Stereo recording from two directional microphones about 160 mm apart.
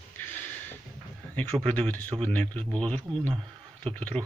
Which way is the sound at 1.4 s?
10° left (ahead or behind).